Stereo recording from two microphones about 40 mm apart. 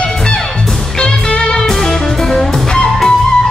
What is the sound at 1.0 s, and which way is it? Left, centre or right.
Music, left.